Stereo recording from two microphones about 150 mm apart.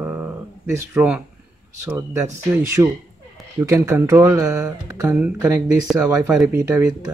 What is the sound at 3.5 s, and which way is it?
Speech, 20° right (ahead or behind).